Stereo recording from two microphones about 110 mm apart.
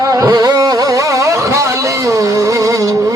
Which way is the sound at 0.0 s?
30° right (ahead or behind).